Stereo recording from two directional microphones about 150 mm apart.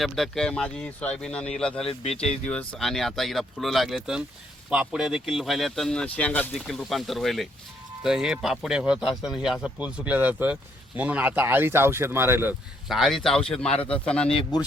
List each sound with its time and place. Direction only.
0.0 s speech: centre (ahead or behind)
1.9 s speech: 45° left (ahead or behind)
2.5 s speech: 5° left (ahead or behind); by 12.5 s 15° right (ahead or behind)
12.9 s speech: centre (ahead or behind)
13.7 s speech: 40° left (ahead or behind)
13.9 s speech: 5° left (ahead or behind)